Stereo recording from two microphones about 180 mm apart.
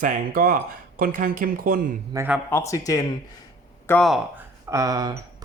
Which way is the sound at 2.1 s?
10° right (ahead or behind).